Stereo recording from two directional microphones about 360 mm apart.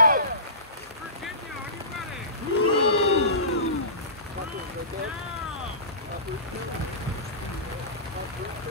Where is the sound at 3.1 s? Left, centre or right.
Left.